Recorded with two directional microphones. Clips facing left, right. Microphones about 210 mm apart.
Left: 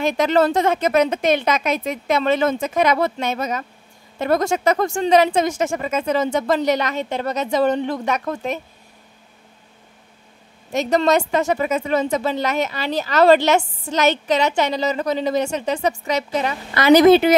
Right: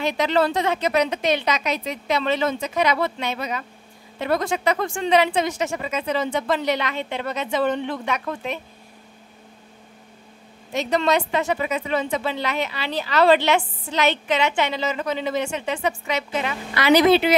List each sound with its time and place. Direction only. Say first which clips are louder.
0.0 s a woman's voice: left 4 dB; 45° left (ahead or behind)
10.7 s a woman's voice: left 4 dB; 45° left (ahead or behind)